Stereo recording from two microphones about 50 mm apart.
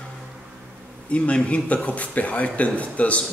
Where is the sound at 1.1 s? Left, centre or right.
Left.